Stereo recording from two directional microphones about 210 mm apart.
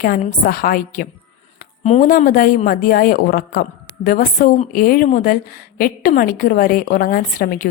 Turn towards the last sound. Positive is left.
turn(degrees=40)  # may be behind; listen again after turning